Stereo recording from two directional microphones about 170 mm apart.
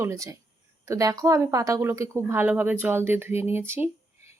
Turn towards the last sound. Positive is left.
turn(degrees=-15)  # may be behind; listen again after turning